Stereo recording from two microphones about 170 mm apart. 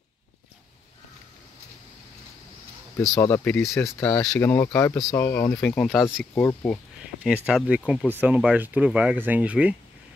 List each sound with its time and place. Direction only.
3.2 s speech: 15° left (ahead or behind)
7.2 s speech: 5° right (ahead or behind)